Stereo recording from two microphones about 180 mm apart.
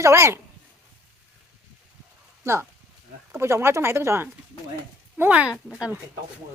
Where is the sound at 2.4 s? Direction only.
15° right (ahead or behind).